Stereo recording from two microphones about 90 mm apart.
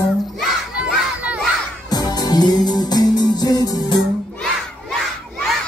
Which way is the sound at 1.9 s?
45° left (ahead or behind).